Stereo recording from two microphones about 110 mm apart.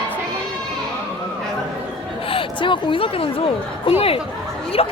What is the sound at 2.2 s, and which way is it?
A woman's voice, 55° left (ahead or behind).